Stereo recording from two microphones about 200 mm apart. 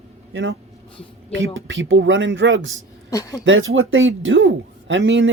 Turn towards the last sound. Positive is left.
turn(degrees=-65)  # may be behind; listen again after turning